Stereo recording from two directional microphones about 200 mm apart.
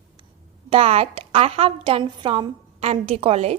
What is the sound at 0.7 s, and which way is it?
A woman's voice, 30° right (ahead or behind).